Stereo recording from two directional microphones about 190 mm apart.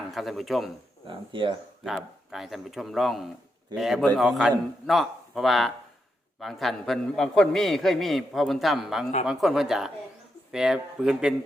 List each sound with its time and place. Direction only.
0.1 s a man's voice: centre (ahead or behind)
1.0 s speech: 25° right (ahead or behind)
1.8 s a man's voice: centre (ahead or behind)